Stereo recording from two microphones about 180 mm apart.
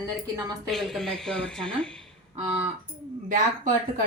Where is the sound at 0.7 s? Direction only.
Centre (ahead or behind).